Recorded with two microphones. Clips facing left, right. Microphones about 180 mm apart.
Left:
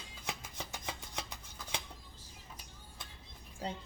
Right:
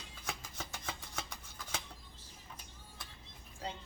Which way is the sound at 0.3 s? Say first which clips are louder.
Left 1 dB; 15° left (ahead or behind).